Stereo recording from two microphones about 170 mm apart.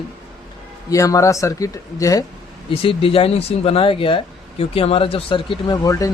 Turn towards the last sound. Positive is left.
turn(degrees=20)  # may be behind; listen again after turning